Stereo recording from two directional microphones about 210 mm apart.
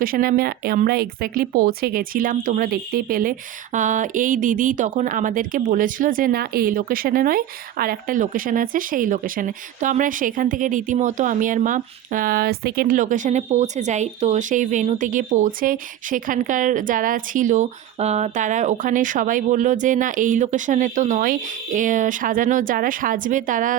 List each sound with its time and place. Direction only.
0.0 s speech: 45° right (ahead or behind)